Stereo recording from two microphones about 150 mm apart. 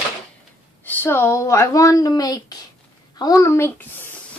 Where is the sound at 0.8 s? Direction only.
15° left (ahead or behind).